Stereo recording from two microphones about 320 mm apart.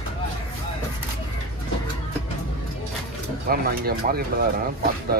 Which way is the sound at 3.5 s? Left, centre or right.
Right.